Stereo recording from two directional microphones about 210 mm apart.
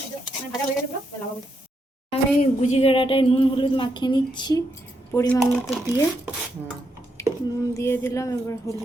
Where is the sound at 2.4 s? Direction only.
35° left (ahead or behind); by 5.8 s 5° left (ahead or behind).